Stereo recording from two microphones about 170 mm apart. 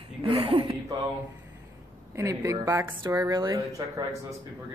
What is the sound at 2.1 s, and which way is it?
Speech, 20° right (ahead or behind).